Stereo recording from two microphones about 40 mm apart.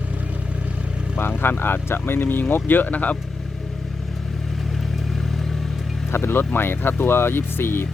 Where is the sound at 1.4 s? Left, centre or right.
Left.